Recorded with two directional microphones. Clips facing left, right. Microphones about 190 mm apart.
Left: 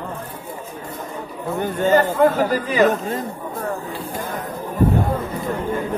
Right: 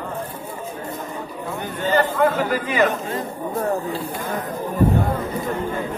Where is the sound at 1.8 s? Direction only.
45° left (ahead or behind).